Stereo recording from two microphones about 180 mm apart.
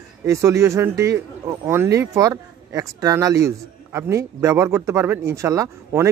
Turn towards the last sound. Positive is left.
turn(degrees=-15)  # may be behind; listen again after turning